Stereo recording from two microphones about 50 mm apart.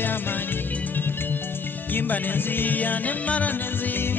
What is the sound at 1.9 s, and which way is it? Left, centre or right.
Music, left.